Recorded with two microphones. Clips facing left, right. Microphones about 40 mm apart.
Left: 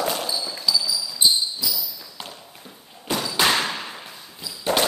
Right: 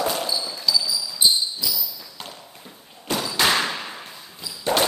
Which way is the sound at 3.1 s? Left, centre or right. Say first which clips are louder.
Even; centre.